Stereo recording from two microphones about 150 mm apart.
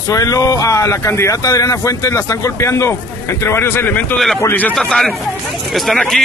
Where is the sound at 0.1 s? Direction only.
20° left (ahead or behind).